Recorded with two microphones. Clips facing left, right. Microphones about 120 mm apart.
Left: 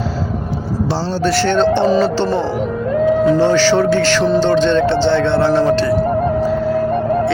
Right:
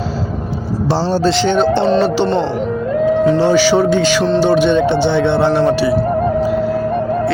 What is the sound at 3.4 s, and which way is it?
Speech, 10° right (ahead or behind).